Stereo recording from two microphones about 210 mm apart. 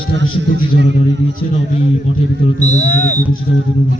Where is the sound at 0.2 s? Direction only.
55° right (ahead or behind).